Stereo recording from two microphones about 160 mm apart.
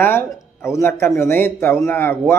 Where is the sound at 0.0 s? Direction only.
15° left (ahead or behind).